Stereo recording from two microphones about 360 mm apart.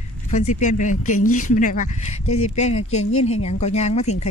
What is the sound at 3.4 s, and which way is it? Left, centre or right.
Speech, centre.